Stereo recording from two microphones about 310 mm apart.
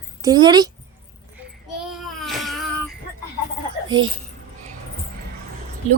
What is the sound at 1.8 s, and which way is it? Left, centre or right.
Baby cry, centre.